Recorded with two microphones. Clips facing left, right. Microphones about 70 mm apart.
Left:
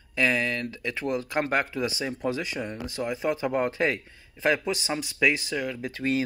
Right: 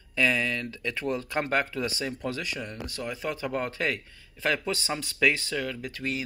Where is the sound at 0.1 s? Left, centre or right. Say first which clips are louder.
Left 1 dB; centre.